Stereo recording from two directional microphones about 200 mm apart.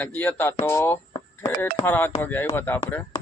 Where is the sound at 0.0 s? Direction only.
10° left (ahead or behind).